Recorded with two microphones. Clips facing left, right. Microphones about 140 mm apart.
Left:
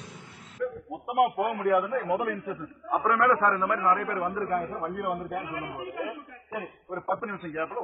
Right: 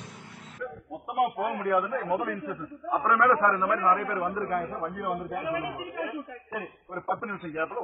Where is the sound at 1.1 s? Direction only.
Centre (ahead or behind).